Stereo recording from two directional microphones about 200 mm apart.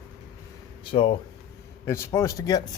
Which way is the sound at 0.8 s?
25° left (ahead or behind).